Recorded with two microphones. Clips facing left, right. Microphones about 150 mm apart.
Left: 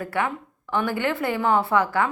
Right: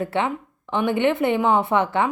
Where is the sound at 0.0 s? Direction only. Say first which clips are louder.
Right 3 dB; 25° right (ahead or behind).